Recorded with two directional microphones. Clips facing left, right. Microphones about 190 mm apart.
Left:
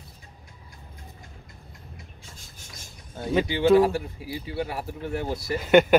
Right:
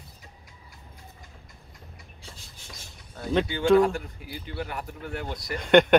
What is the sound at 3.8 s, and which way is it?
A man's voice, 35° left (ahead or behind).